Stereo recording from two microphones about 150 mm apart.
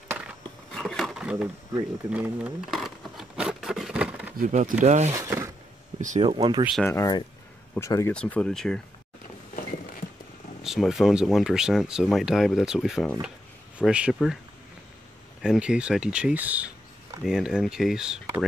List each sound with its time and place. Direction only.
0.1 s a sound: 10° right (ahead or behind)
0.7 s a sound: 5° left (ahead or behind)
2.1 s speech: 10° right (ahead or behind)
2.7 s a sound: centre (ahead or behind)
4.4 s speech: 60° right (ahead or behind)
4.8 s speech: 50° right (ahead or behind)
5.1 s speech: 20° right (ahead or behind)
5.9 s speech: 55° right (ahead or behind)
6.2 s speech: 30° right (ahead or behind)
6.8 s speech: 20° left (ahead or behind)
8.1 s speech: 5° left (ahead or behind)
10.6 s speech: centre (ahead or behind)
15.4 s speech: 5° right (ahead or behind)